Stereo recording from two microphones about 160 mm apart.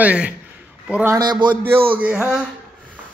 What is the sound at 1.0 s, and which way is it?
Speech, 20° right (ahead or behind).